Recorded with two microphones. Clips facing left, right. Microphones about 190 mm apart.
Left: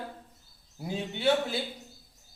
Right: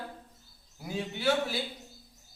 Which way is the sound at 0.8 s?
25° left (ahead or behind).